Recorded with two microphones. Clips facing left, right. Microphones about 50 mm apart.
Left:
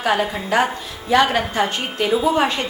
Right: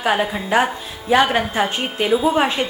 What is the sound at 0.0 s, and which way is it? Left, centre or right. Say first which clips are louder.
A woman's voice: even; centre.